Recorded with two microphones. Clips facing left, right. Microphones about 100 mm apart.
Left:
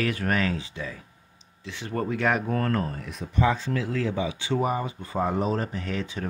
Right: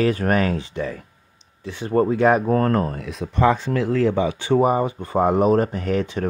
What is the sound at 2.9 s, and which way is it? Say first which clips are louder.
Speech: right 3 dB; 90° right.